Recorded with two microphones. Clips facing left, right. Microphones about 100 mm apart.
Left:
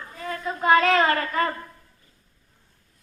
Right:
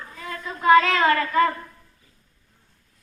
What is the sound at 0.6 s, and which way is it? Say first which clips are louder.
Speech: right 2 dB; 35° left (ahead or behind).